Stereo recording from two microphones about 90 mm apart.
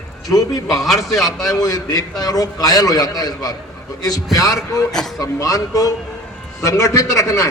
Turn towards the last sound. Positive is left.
turn(degrees=40)  # may be behind; listen again after turning